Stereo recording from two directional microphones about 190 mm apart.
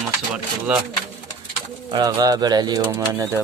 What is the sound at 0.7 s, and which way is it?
Speech, 10° right (ahead or behind).